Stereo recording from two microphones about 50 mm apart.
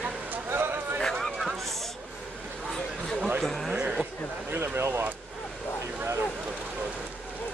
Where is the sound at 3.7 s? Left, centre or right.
Right.